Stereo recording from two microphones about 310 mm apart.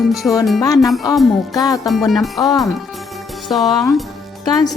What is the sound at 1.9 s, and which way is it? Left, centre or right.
Music, centre.